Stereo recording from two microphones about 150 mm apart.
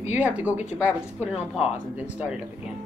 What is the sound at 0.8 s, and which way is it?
Speech, 10° right (ahead or behind).